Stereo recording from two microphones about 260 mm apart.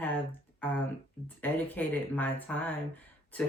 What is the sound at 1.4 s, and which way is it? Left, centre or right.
Speech, centre.